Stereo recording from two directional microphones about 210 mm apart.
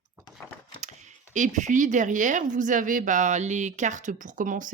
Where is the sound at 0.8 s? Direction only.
35° right (ahead or behind).